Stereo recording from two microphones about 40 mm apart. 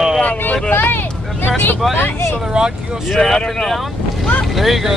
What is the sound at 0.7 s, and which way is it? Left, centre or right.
Vehicle, left.